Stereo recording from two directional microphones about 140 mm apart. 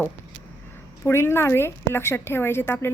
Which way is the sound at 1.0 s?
15° left (ahead or behind).